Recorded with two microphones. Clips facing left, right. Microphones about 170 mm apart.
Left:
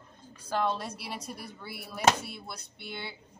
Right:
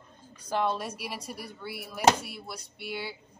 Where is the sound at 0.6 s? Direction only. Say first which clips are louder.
Right 1 dB; 10° right (ahead or behind).